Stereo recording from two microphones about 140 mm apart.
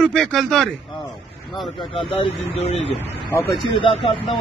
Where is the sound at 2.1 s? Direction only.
50° left (ahead or behind).